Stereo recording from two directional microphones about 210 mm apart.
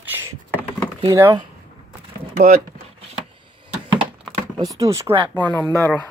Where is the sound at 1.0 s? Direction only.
15° right (ahead or behind).